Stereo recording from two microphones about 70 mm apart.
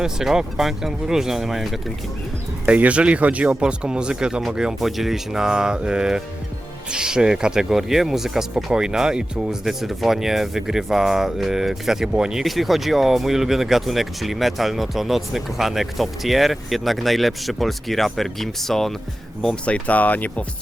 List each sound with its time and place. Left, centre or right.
0.0 s speech: centre
2.6 s speech: centre
19.6 s speech: centre